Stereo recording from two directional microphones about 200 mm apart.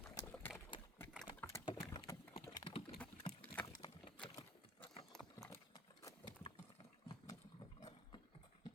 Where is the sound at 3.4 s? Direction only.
10° left (ahead or behind).